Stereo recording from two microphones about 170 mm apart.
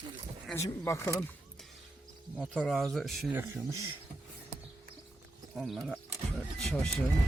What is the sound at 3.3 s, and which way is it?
Speech, 10° right (ahead or behind).